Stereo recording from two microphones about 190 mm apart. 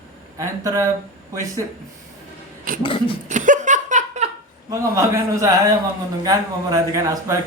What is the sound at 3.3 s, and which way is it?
Laughter, 40° right (ahead or behind).